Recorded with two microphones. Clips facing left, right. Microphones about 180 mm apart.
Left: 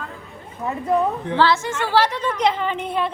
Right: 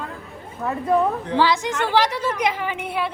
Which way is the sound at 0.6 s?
15° left (ahead or behind).